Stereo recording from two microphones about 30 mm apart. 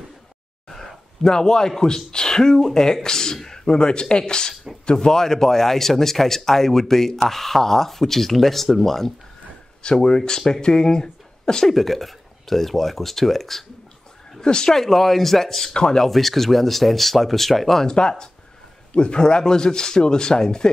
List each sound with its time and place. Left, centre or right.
0.7 s a sound: centre
1.8 s a man's voice: left
10.0 s speech: left
11.6 s a man's voice: centre
14.4 s speech: left
14.7 s a man's voice: centre
15.7 s speech: left
16.1 s speech: centre
17.8 s speech: left